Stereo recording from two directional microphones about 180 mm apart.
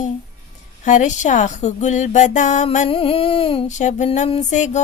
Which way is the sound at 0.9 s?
40° left (ahead or behind).